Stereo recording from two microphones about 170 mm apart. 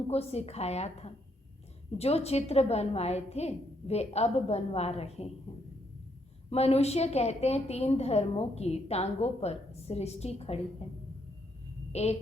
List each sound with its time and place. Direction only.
0.1 s a woman's voice: 40° left (ahead or behind)
6.5 s a woman's voice: 35° left (ahead or behind)
11.9 s a sound: 40° left (ahead or behind)